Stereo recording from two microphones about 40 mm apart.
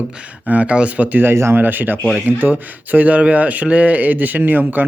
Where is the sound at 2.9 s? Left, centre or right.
Right.